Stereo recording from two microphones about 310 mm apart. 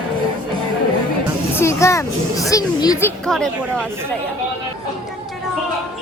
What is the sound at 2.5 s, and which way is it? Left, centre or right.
Speech, centre.